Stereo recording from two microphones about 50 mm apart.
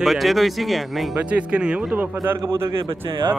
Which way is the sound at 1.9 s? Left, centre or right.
Right.